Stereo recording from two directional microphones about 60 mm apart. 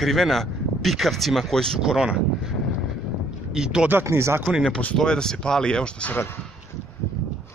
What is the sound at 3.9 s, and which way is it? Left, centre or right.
Speech, right.